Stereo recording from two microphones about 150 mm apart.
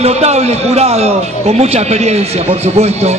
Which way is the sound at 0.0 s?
45° right (ahead or behind).